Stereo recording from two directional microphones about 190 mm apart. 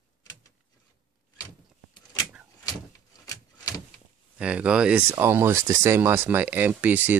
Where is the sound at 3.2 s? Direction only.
20° left (ahead or behind).